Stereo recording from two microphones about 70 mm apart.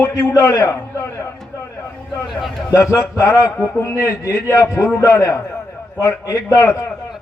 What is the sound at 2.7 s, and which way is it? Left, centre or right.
A man's voice, left.